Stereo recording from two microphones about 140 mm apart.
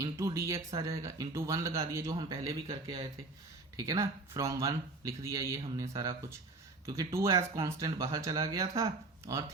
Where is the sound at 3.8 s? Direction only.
20° right (ahead or behind).